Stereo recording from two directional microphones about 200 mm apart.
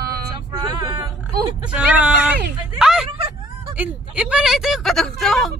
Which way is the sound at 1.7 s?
5° right (ahead or behind).